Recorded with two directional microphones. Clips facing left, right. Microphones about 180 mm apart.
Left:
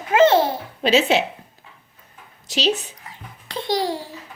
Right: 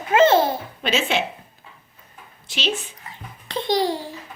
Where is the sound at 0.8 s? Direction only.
35° left (ahead or behind).